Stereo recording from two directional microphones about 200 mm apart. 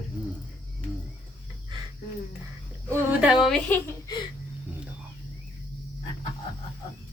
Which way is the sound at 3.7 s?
10° left (ahead or behind).